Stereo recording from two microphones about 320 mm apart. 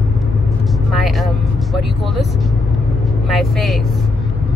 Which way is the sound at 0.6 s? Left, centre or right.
Centre.